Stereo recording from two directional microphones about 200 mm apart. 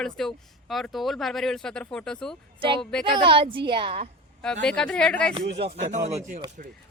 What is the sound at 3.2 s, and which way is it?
Speech, 25° right (ahead or behind).